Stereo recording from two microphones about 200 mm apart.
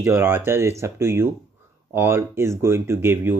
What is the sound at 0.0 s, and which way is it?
Speech, 15° right (ahead or behind).